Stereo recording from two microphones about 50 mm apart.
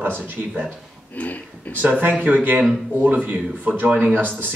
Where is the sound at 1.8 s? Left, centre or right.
Right.